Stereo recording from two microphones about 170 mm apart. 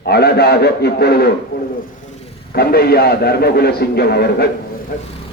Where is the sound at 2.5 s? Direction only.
65° left (ahead or behind).